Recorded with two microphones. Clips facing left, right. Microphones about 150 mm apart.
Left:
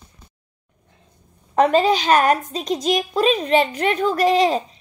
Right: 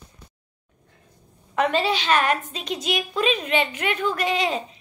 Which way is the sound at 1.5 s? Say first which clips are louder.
Left 6 dB; 40° left (ahead or behind).